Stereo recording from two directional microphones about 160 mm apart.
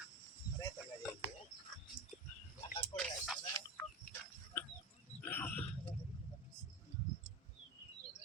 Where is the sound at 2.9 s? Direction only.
30° left (ahead or behind).